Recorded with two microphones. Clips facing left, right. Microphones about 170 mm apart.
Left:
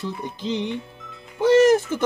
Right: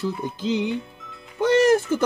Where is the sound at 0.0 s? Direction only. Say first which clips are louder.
Right 3 dB; 5° right (ahead or behind).